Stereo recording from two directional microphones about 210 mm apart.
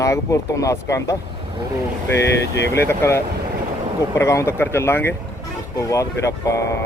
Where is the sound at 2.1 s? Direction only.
55° left (ahead or behind).